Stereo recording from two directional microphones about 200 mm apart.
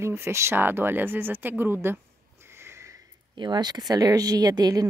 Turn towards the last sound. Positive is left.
turn(degrees=-20)  # may be behind; listen again after turning